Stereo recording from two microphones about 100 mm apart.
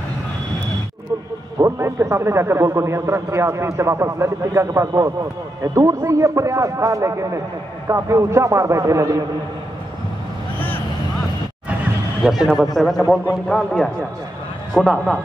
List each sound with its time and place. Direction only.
1.6 s a man's voice: 25° right (ahead or behind)
12.2 s a man's voice: 5° right (ahead or behind)